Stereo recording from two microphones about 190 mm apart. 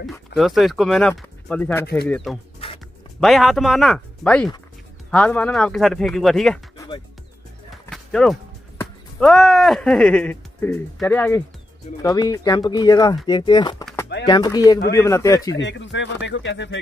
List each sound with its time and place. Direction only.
0.4 s speech: centre (ahead or behind)
2.6 s music: 30° left (ahead or behind)
3.2 s speech: centre (ahead or behind)
7.7 s speech: centre (ahead or behind)
15.5 s speech: 75° left (ahead or behind)